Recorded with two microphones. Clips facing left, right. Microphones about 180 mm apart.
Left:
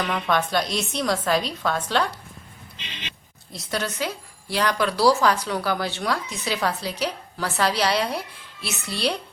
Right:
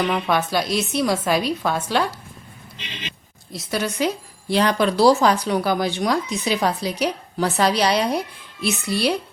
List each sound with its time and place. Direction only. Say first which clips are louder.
0.0 s a woman's voice: right 3 dB; 10° right (ahead or behind)
3.5 s a woman's voice: right 3 dB; 5° right (ahead or behind)